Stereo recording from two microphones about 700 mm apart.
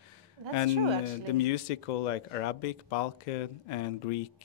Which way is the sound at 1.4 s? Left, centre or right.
Left.